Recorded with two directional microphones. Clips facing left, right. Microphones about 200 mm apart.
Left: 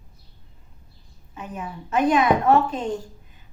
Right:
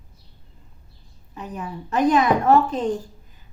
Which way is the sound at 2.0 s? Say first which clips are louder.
Right 1 dB; 40° right (ahead or behind).